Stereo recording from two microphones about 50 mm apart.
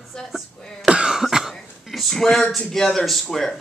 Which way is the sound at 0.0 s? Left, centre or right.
Centre.